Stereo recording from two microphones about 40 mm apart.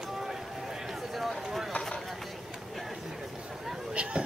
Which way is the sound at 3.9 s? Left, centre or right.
Right.